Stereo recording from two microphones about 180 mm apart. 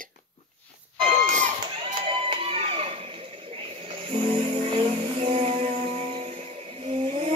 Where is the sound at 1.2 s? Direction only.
45° right (ahead or behind).